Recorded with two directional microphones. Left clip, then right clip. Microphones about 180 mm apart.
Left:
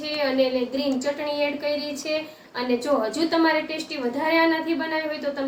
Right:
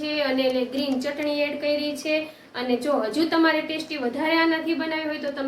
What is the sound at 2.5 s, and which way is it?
Speech, 10° right (ahead or behind).